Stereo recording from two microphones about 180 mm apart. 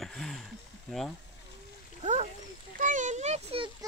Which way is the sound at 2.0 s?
40° right (ahead or behind).